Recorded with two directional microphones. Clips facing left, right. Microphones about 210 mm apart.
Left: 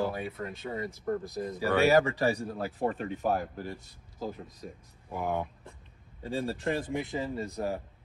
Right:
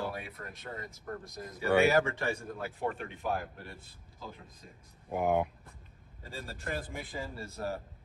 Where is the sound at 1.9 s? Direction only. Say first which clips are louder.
Left 5 dB; 35° left (ahead or behind).